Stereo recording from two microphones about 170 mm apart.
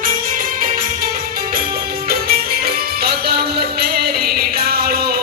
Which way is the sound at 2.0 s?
65° right (ahead or behind).